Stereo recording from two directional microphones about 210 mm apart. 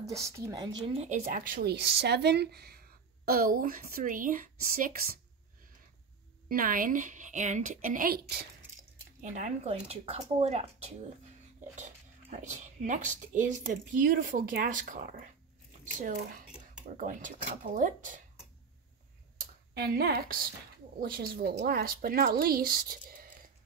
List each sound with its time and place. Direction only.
0.2 s a woman's voice: 15° right (ahead or behind); by 5.1 s 45° right (ahead or behind)
6.5 s speech: 40° right (ahead or behind)
9.2 s speech: 35° right (ahead or behind)
19.7 s a woman's voice: 50° right (ahead or behind)